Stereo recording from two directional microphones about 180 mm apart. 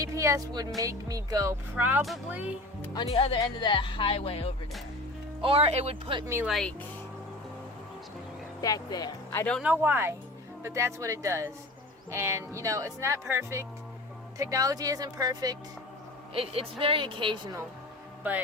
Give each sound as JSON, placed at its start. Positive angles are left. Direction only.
{"t": 0.0, "sound": "a woman's voice", "side_deg": -15}
{"t": 1.7, "sound": "speech", "side_deg": -5}
{"t": 2.9, "sound": "speech", "side_deg": 25}
{"t": 5.4, "sound": "speech", "side_deg": -35}
{"t": 6.2, "sound": "speech", "side_deg": -15}
{"t": 6.5, "sound": "speech", "side_deg": 0}
{"t": 8.6, "sound": "speech", "side_deg": 20}
{"t": 9.6, "sound": "a woman's voice", "side_deg": -10}
{"t": 16.3, "sound": "a woman's voice", "side_deg": -30}
{"t": 18.2, "sound": "a man's voice", "side_deg": -10}